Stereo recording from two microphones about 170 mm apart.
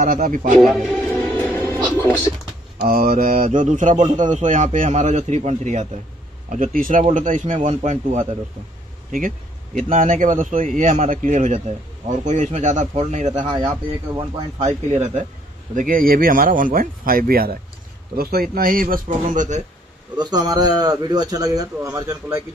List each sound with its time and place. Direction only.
0.0 s speech: 55° right (ahead or behind)
0.6 s speech: centre (ahead or behind)
1.1 s music: 10° left (ahead or behind)
2.8 s a man's voice: 55° right (ahead or behind); by 8.4 s 40° right (ahead or behind)
9.8 s a man's voice: 50° right (ahead or behind)
13.5 s speech: 30° right (ahead or behind); by 19.6 s 50° right (ahead or behind)
20.2 s a man's voice: 25° right (ahead or behind)